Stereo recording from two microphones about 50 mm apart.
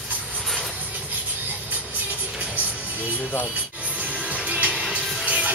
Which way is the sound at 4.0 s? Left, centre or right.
Right.